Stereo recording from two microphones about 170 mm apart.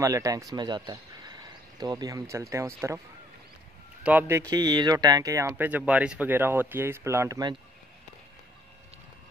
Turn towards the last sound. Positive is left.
turn(degrees=-20)  # may be behind; listen again after turning